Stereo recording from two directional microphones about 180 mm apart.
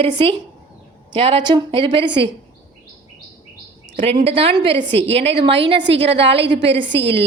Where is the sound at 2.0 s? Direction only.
70° right (ahead or behind).